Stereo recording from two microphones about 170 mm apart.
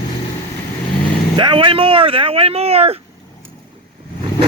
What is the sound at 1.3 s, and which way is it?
Speech, 30° right (ahead or behind).